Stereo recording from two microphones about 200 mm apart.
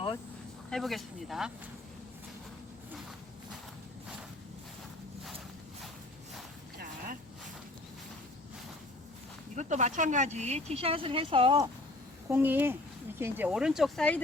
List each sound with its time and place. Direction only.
0.7 s speech: centre (ahead or behind)
9.6 s speech: 35° right (ahead or behind)
12.3 s speech: 10° right (ahead or behind)